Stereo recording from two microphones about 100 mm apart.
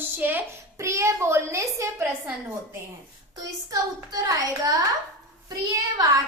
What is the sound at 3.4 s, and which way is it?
A child's voice, 35° right (ahead or behind).